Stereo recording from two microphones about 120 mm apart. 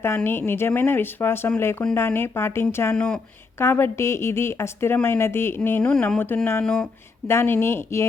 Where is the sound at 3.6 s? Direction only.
20° left (ahead or behind).